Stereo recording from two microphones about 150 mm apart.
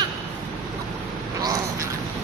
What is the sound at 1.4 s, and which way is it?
Crow, 25° right (ahead or behind).